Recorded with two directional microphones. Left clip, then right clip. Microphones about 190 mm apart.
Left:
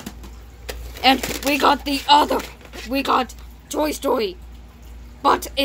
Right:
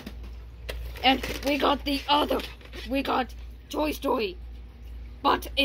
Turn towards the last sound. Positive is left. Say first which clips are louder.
# left 6 dB
turn(degrees=-5)  # may be behind; listen again after turning